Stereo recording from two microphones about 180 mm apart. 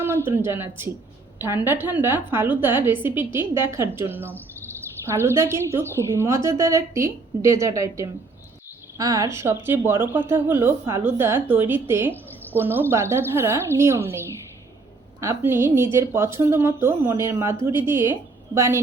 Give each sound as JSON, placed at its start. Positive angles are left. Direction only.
{"t": 0.0, "sound": "a woman's voice", "side_deg": -10}